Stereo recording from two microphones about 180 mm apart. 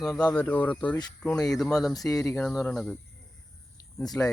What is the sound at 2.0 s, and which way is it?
Speech, 15° left (ahead or behind).